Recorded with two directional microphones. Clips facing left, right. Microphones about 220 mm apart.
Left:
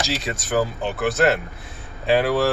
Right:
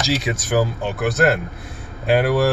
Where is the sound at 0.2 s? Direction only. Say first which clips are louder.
Right 2 dB; 5° right (ahead or behind).